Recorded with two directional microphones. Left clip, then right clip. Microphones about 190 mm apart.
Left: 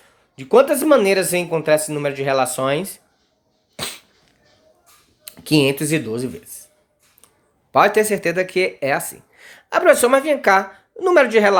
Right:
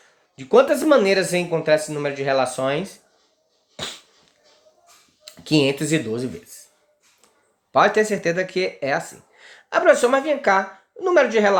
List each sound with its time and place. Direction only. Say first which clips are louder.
0.0 s speech: left 3 dB; 30° left (ahead or behind)
3.8 s dog: left 2 dB; 35° left (ahead or behind)
5.2 s speech: left 2 dB; 30° left (ahead or behind)
7.7 s speech: left 2 dB; 35° left (ahead or behind)